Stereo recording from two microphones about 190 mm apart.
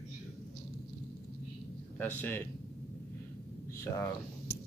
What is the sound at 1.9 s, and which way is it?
Speech, 10° left (ahead or behind).